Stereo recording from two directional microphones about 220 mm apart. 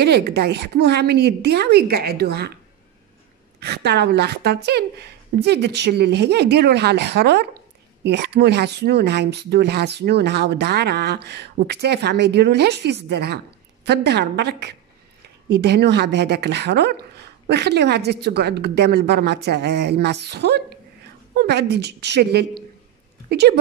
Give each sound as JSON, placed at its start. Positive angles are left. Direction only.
{"t": 0.0, "sound": "speech", "side_deg": -50}
{"t": 3.5, "sound": "speech", "side_deg": -50}